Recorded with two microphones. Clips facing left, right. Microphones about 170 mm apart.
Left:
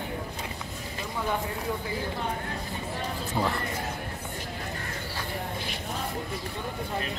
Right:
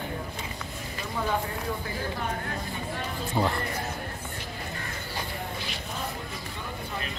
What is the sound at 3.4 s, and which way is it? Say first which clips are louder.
Speech: right 2 dB; centre (ahead or behind).